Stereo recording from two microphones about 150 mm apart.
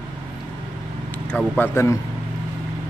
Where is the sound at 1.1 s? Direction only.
10° left (ahead or behind).